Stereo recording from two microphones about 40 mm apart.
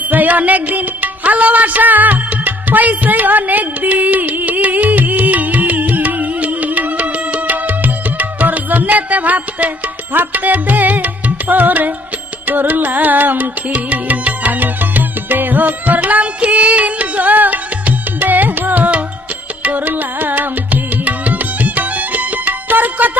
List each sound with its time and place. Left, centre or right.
0.1 s music: right